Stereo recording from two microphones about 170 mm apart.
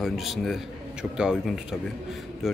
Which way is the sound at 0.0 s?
Centre (ahead or behind).